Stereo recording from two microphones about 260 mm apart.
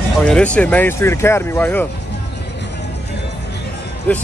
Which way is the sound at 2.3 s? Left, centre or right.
Left.